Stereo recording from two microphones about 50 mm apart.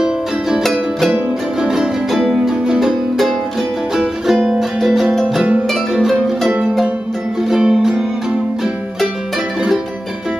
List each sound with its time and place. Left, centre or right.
0.6 s music: centre
1.1 s music: centre
3.9 s music: centre
7.4 s music: centre